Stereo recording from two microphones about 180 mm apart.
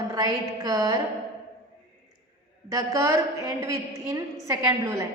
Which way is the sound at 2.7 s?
20° right (ahead or behind).